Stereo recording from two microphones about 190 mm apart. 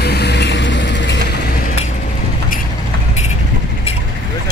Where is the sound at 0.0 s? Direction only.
60° left (ahead or behind).